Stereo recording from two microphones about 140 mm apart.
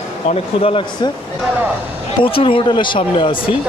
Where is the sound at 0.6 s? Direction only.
40° left (ahead or behind).